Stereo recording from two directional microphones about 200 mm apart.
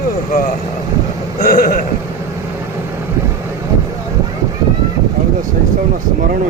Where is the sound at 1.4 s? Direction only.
45° left (ahead or behind).